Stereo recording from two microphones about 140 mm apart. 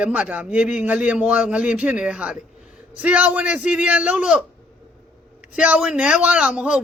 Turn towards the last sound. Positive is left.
turn(degrees=-5)  # may be behind; listen again after turning